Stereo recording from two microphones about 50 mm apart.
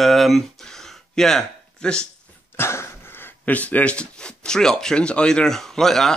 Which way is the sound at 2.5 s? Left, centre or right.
Left.